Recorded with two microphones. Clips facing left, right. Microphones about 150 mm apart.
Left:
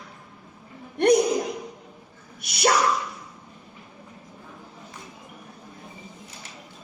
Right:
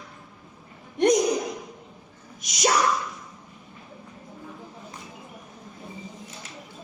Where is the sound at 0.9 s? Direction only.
60° left (ahead or behind).